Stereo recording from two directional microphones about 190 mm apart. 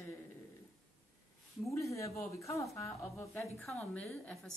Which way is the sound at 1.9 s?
15° left (ahead or behind).